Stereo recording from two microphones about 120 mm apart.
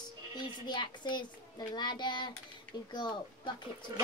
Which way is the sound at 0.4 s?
40° left (ahead or behind).